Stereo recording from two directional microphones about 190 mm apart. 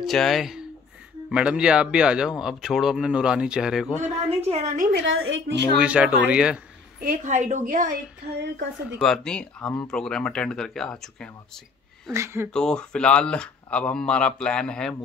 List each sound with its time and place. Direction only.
0.0 s speech: centre (ahead or behind)
4.0 s a woman's voice: 35° right (ahead or behind)
4.9 s a woman's voice: 80° right
5.8 s speech: 5° right (ahead or behind)
7.0 s a woman's voice: 45° right (ahead or behind)
9.0 s speech: 5° left (ahead or behind)
12.1 s speech: 15° right (ahead or behind)
12.4 s speech: 5° left (ahead or behind)